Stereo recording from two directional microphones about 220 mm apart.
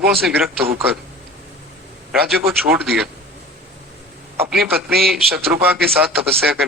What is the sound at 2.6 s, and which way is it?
Speech, centre (ahead or behind).